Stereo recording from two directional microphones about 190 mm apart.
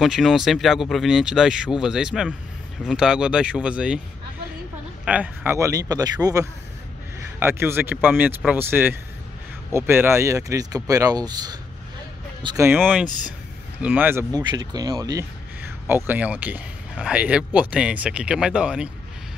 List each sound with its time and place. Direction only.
0.0 s speech: centre (ahead or behind)
5.0 s speech: 5° right (ahead or behind)
12.5 s speech: 10° right (ahead or behind)
13.8 s speech: 10° right (ahead or behind)
14.4 s speech: 20° right (ahead or behind); by 18.9 s 5° right (ahead or behind)